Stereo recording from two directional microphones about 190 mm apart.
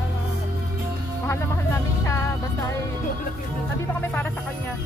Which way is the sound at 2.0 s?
15° left (ahead or behind).